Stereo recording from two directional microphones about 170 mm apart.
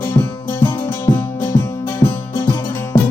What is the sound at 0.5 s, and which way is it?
Music, 30° left (ahead or behind).